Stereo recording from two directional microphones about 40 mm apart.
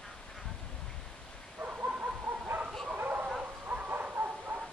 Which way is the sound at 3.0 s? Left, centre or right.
Right.